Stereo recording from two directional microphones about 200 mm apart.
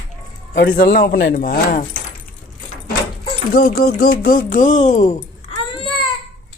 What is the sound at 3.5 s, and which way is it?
Speech, 45° left (ahead or behind).